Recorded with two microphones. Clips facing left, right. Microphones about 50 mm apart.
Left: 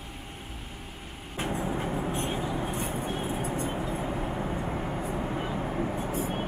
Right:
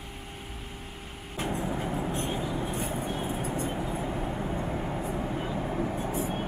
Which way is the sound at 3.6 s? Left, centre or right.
Centre.